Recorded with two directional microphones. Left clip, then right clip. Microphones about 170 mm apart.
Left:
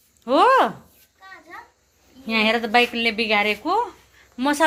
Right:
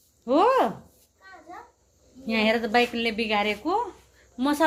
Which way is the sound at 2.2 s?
15° left (ahead or behind).